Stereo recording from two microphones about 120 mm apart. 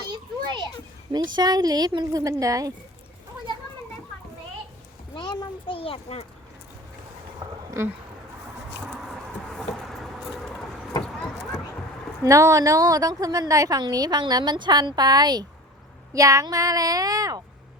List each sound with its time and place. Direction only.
0.1 s children playing: 35° right (ahead or behind)
1.4 s a woman's voice: 35° right (ahead or behind)
5.1 s a sound: 40° left (ahead or behind); by 6.2 s 55° left (ahead or behind)
7.8 s speech: 25° right (ahead or behind)
9.5 s vehicle: centre (ahead or behind)
12.2 s a woman's voice: 30° right (ahead or behind)